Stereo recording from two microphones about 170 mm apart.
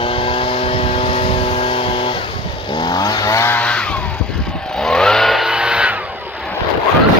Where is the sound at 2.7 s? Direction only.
25° left (ahead or behind); by 4.0 s 5° left (ahead or behind).